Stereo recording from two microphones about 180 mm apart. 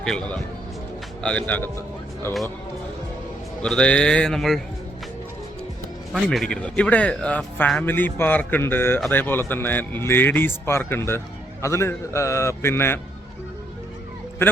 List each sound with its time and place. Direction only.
0.0 s speech: 5° left (ahead or behind)
3.6 s speech: 5° left (ahead or behind)
6.2 s speech: 5° left (ahead or behind)